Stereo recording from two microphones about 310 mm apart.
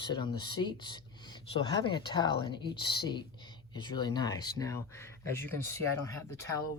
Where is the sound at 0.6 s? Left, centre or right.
Centre.